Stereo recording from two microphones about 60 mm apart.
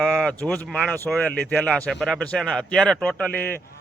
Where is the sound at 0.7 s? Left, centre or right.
Centre.